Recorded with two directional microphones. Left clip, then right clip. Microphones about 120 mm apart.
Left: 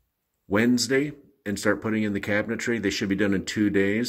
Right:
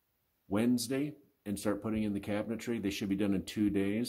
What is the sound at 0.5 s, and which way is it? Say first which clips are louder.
Speech: left 10 dB; 30° right (ahead or behind).